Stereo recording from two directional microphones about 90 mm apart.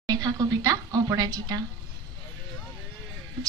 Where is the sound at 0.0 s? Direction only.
45° right (ahead or behind).